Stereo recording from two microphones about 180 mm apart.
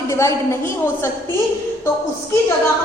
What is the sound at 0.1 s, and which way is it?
Speech, 20° left (ahead or behind).